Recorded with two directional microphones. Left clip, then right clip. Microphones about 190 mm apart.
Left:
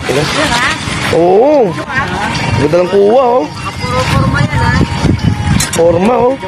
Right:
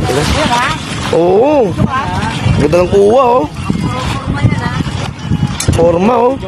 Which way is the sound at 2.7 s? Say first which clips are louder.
Even; 15° right (ahead or behind).